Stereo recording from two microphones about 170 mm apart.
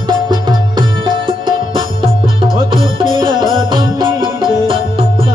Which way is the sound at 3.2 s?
25° right (ahead or behind).